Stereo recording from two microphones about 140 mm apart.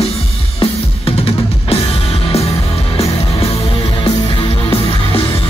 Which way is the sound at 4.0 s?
40° left (ahead or behind).